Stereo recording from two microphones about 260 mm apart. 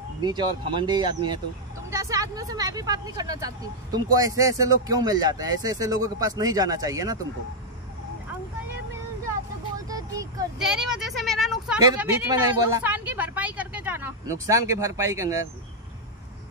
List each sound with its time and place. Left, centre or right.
0.2 s speech: centre
9.8 s a sound: centre
10.6 s speech: centre